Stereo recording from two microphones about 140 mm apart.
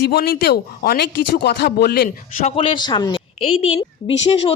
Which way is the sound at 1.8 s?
75° left (ahead or behind).